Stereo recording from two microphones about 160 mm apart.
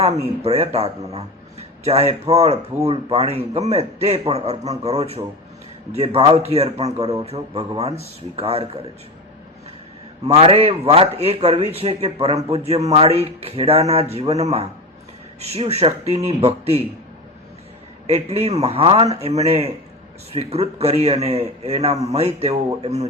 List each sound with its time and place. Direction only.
0.0 s a man's voice: 40° right (ahead or behind)
10.2 s a man's voice: 40° right (ahead or behind)
18.0 s a man's voice: 40° right (ahead or behind)